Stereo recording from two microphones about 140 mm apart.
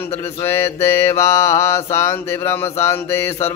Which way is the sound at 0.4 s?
20° left (ahead or behind).